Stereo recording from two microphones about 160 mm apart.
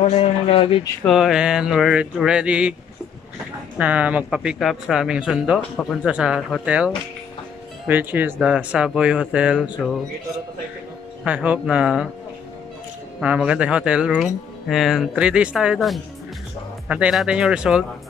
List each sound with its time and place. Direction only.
0.0 s speech: 40° left (ahead or behind)
1.0 s speech: centre (ahead or behind)
3.7 s speech: 10° right (ahead or behind)
11.2 s speech: 10° right (ahead or behind)
13.2 s speech: 5° right (ahead or behind)